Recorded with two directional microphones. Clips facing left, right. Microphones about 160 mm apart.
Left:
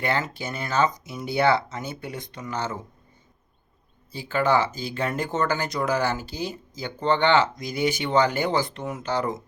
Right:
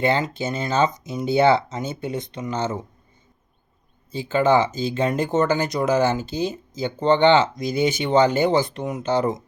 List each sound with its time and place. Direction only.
0.0 s speech: 25° right (ahead or behind)
4.1 s speech: 20° right (ahead or behind)